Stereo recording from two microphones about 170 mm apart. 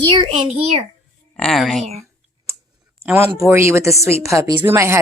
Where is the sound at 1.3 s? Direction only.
Centre (ahead or behind).